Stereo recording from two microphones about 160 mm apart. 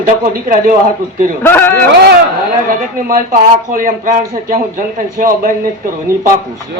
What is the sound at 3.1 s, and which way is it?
Speech, 60° right (ahead or behind).